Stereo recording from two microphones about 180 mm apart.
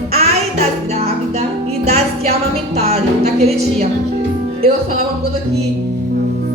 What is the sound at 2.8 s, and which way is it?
Music, 35° right (ahead or behind).